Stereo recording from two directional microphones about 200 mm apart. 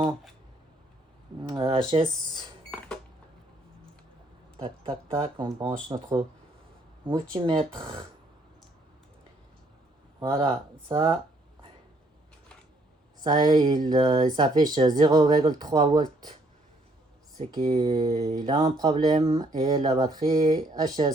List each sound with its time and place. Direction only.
1.5 s speech: 25° right (ahead or behind)
2.6 s cash register: 5° left (ahead or behind)
4.6 s speech: 25° right (ahead or behind)
10.2 s speech: 25° right (ahead or behind)
13.2 s speech: 20° right (ahead or behind)
17.5 s speech: 20° right (ahead or behind)